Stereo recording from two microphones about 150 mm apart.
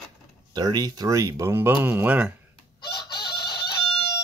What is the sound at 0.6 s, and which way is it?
Speech, 25° right (ahead or behind).